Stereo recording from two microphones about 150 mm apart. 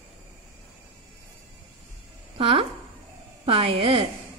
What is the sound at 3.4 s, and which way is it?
Speech, 40° right (ahead or behind).